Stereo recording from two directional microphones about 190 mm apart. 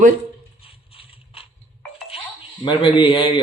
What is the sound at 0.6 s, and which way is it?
Mechanisms, 30° left (ahead or behind).